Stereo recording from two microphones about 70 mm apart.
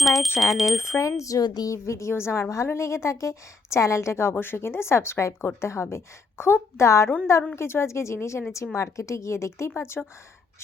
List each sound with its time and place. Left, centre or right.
0.0 s a sound: centre
0.5 s speech: centre
0.9 s a woman's voice: left
1.5 s a woman's voice: left
1.7 s a woman's voice: left